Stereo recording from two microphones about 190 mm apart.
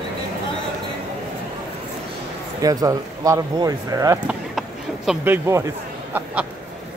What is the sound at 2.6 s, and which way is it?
Speech, 20° right (ahead or behind).